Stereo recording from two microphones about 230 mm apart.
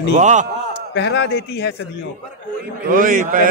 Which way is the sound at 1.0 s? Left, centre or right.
Left.